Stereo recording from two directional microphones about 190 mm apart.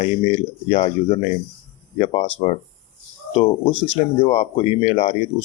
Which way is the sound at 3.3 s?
25° left (ahead or behind).